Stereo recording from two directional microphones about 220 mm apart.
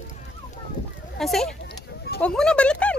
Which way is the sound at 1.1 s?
Centre (ahead or behind).